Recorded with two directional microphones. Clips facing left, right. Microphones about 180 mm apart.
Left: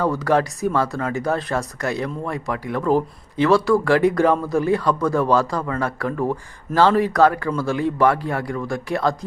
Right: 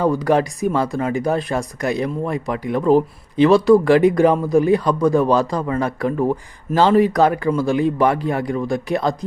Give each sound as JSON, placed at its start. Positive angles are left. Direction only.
{"t": 0.0, "sound": "speech", "side_deg": -15}